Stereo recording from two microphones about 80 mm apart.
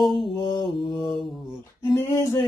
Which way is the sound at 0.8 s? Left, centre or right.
Left.